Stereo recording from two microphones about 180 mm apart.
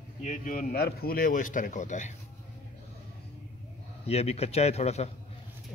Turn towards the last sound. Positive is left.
turn(degrees=35)  # may be behind; listen again after turning